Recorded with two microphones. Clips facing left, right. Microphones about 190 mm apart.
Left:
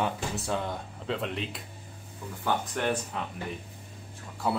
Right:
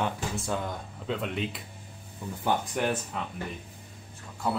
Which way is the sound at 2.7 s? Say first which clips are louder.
Even; 5° right (ahead or behind).